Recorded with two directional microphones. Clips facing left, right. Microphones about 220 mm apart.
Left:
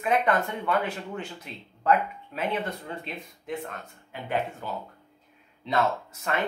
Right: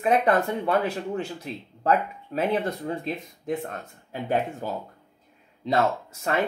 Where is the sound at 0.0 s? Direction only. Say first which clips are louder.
Right 3 dB; 35° right (ahead or behind).